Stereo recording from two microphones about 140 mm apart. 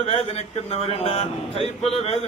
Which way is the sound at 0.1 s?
45° left (ahead or behind).